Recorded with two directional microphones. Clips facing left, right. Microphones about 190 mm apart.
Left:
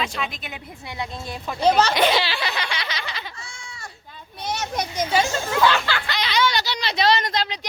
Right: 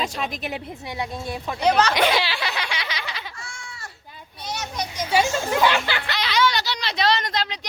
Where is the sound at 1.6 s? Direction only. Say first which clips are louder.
Left 1 dB; 30° left (ahead or behind).